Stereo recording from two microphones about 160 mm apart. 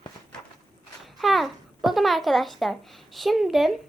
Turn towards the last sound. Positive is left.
turn(degrees=0)  # may be behind; listen again after turning